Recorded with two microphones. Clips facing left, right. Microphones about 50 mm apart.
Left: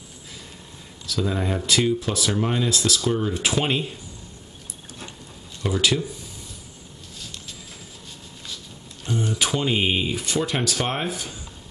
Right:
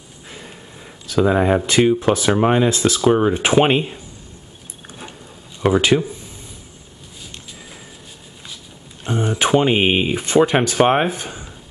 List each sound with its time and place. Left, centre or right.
1.0 s speech: right
5.6 s speech: right
9.0 s speech: right